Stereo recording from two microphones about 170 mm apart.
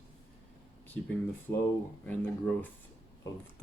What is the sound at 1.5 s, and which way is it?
Speech, 10° left (ahead or behind).